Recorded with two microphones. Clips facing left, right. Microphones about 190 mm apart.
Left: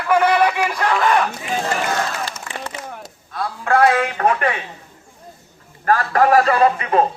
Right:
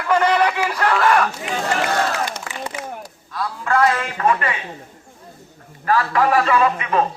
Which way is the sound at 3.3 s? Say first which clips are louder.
Left 2 dB; 55° left (ahead or behind).